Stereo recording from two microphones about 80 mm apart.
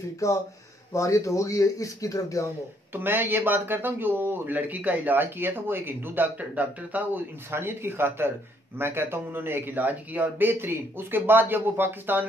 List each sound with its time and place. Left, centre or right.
0.2 s speech: left
2.9 s speech: right